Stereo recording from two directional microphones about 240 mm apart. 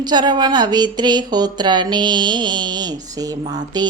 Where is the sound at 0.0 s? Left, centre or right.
Centre.